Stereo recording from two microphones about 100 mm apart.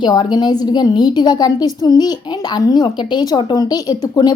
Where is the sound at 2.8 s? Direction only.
50° left (ahead or behind).